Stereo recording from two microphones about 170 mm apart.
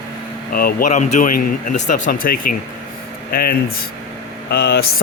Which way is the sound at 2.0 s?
55° left (ahead or behind).